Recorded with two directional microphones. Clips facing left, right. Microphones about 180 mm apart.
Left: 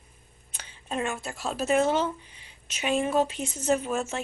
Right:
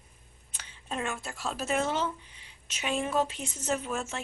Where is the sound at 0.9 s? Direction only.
10° left (ahead or behind).